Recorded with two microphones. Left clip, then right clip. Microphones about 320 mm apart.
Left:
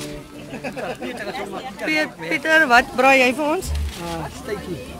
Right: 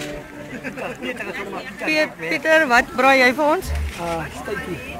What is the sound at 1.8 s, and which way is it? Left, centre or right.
Speech, centre.